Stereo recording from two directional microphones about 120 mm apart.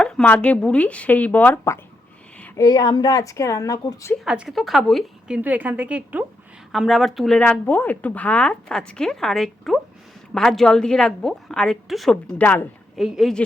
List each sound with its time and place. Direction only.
0.0 s a woman's voice: 5° left (ahead or behind)
2.6 s a woman's voice: 30° left (ahead or behind)
4.3 s a woman's voice: 5° right (ahead or behind)
5.4 s a woman's voice: 15° right (ahead or behind)
6.7 s a woman's voice: centre (ahead or behind)
13.0 s a woman's voice: 5° right (ahead or behind)